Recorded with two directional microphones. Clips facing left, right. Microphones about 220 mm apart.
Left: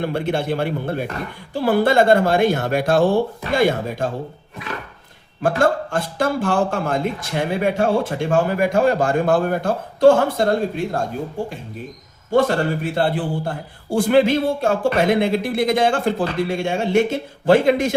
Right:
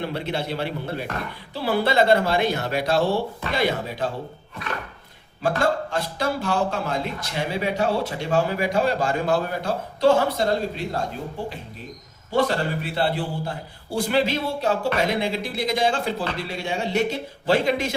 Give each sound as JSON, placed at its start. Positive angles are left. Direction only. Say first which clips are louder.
{"t": 0.0, "sound": "a man's voice", "louder": "left 6 dB", "side_deg": 50}
{"t": 5.4, "sound": "a man's voice", "louder": "left 4 dB", "side_deg": 50}
{"t": 12.3, "sound": "a man's voice", "louder": "left 5 dB", "side_deg": 50}